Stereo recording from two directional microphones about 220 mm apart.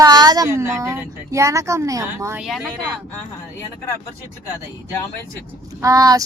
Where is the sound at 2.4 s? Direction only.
Centre (ahead or behind).